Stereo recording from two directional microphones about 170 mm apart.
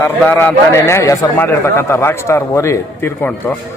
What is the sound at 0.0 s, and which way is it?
A man's voice, 10° left (ahead or behind).